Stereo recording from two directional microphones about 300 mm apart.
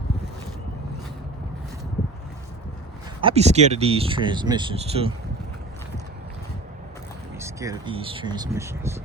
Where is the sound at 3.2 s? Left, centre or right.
Centre.